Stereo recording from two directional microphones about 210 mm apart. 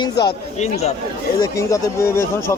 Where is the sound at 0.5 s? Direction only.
30° left (ahead or behind).